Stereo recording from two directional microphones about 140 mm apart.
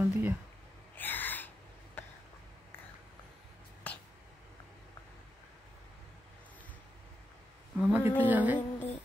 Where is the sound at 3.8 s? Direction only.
10° left (ahead or behind).